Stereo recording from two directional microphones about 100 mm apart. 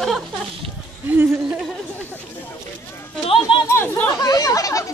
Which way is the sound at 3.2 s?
65° left (ahead or behind).